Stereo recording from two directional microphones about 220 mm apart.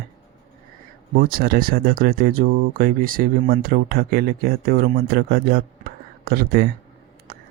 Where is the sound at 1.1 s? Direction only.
40° right (ahead or behind).